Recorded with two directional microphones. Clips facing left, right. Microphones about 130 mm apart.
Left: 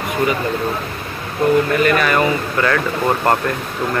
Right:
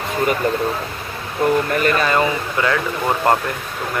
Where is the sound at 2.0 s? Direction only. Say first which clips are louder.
Left 2 dB; 25° right (ahead or behind).